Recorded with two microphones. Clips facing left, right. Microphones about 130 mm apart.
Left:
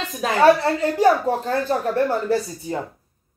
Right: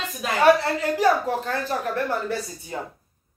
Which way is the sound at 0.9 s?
30° left (ahead or behind).